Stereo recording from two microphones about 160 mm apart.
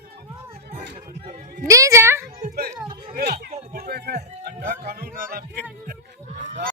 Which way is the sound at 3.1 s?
75° right (ahead or behind).